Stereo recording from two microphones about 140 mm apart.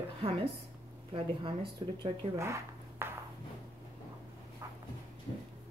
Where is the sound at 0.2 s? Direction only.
40° right (ahead or behind).